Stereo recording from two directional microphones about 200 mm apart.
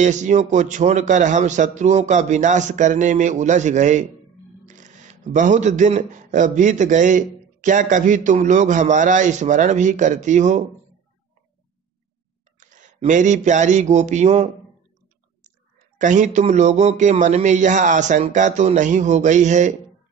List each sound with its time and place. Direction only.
0.0 s speech: 35° right (ahead or behind)
12.5 s a sound: 40° right (ahead or behind)
16.0 s speech: 40° right (ahead or behind)